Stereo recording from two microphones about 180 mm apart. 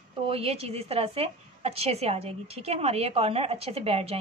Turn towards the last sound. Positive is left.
turn(degrees=-35)  # may be behind; listen again after turning